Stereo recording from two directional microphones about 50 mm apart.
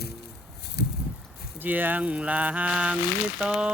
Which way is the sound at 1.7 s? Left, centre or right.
Right.